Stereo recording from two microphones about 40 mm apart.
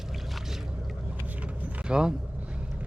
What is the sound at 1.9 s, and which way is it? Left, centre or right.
Speech, right.